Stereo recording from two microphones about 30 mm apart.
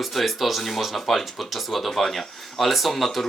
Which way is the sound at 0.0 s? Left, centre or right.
Centre.